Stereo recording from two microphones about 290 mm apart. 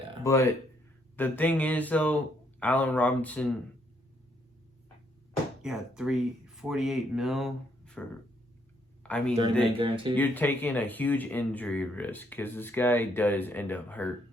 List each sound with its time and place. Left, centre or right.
0.3 s speech: centre
5.6 s speech: centre
9.0 s speech: centre
9.6 s speech: centre
10.2 s speech: centre